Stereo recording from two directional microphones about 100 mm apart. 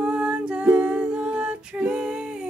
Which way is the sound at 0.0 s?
10° right (ahead or behind).